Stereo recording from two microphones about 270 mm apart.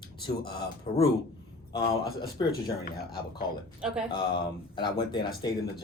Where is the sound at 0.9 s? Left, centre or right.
Left.